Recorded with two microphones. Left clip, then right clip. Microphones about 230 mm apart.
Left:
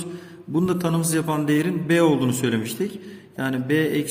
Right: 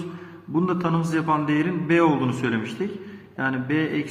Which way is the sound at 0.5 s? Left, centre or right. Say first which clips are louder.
Even; left.